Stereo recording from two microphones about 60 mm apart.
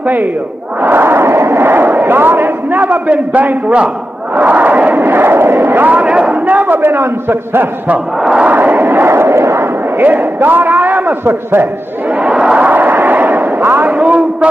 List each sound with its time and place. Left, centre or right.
0.0 s speech: right
8.2 s battle cry: centre
8.5 s crowd: right
9.9 s a man's voice: right
12.1 s a sound: centre
12.6 s artillery fire: right
13.8 s a man's voice: right